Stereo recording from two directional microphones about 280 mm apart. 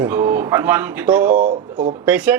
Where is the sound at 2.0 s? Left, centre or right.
Centre.